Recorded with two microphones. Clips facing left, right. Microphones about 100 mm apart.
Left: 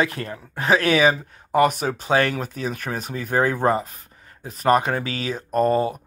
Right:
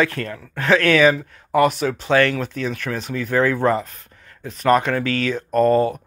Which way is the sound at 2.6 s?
40° left (ahead or behind).